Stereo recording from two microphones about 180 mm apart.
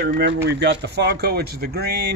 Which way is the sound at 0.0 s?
65° right (ahead or behind).